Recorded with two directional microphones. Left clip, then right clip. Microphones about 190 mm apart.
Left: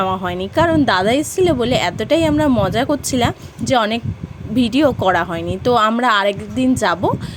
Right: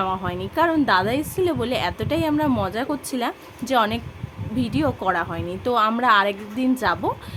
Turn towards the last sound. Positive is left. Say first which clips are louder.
# left 5 dB
turn(degrees=30)  # may be behind; listen again after turning